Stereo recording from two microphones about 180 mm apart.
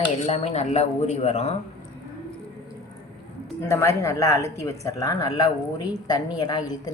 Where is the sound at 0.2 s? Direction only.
35° left (ahead or behind).